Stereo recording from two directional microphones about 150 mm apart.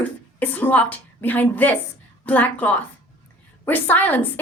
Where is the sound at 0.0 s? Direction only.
10° left (ahead or behind).